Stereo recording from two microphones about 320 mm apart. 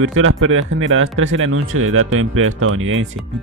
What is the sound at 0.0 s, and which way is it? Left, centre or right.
Speech, right.